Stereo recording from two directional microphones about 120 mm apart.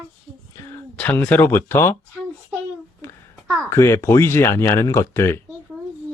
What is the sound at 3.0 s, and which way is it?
Babbling, 25° left (ahead or behind).